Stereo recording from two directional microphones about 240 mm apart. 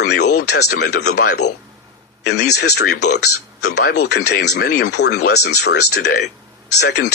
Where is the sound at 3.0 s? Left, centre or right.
Left.